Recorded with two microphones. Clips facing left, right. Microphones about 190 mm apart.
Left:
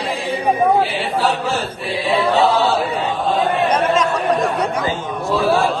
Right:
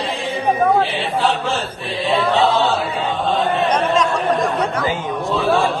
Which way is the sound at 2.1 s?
10° left (ahead or behind).